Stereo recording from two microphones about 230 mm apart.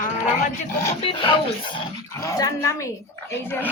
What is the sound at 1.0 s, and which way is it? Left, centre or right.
Speech, left.